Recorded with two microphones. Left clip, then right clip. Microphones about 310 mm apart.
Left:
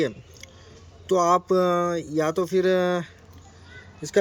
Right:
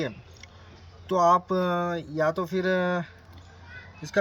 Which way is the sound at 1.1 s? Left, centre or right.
Centre.